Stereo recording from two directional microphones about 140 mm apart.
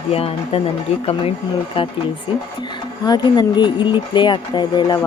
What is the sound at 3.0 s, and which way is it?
A woman's voice, 30° left (ahead or behind).